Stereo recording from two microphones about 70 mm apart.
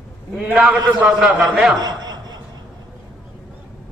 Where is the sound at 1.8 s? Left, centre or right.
Right.